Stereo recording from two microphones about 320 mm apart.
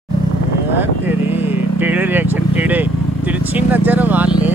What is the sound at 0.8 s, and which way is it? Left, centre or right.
Vehicle, centre.